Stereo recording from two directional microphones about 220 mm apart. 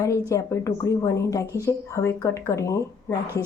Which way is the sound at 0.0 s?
15° left (ahead or behind).